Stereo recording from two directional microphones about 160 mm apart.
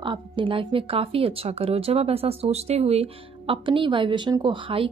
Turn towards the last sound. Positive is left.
turn(degrees=-30)  # may be behind; listen again after turning